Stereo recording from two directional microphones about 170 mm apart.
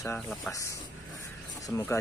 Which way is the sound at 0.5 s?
20° left (ahead or behind).